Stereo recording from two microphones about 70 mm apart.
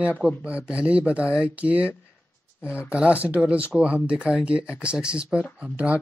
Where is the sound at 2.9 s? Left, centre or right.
Centre.